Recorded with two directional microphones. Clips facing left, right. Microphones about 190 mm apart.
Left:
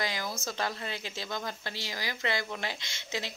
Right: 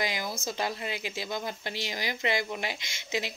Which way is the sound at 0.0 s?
15° right (ahead or behind).